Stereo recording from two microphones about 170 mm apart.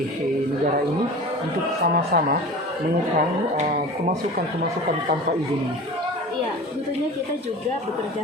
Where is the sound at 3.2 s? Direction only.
55° right (ahead or behind).